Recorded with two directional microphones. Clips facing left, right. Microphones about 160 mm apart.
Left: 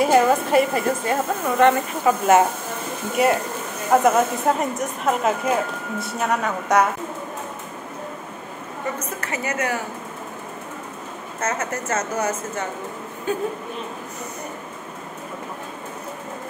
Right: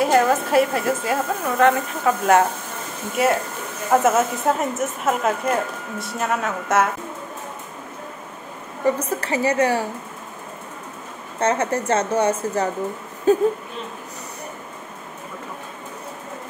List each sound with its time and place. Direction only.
0.0 s speech: centre (ahead or behind)
8.8 s a woman's voice: 30° right (ahead or behind)
11.3 s a woman's voice: 30° right (ahead or behind)